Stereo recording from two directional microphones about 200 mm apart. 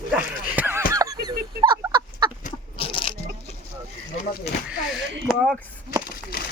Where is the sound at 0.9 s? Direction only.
20° right (ahead or behind).